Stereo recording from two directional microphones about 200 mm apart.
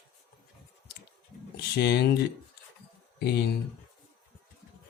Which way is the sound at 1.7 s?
55° left (ahead or behind).